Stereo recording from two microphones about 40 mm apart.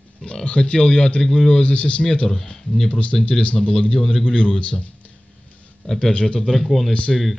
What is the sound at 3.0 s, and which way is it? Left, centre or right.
Speech, left.